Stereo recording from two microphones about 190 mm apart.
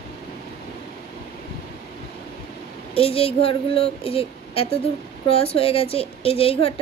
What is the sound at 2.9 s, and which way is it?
A woman's voice, 30° left (ahead or behind).